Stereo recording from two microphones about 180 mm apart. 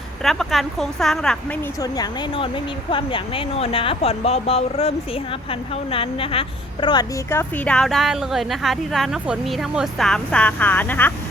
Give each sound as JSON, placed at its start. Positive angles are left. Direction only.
{"t": 0.2, "sound": "speech", "side_deg": 0}
{"t": 1.8, "sound": "speech", "side_deg": 25}